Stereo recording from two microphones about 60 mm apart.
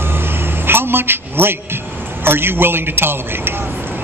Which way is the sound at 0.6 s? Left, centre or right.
Right.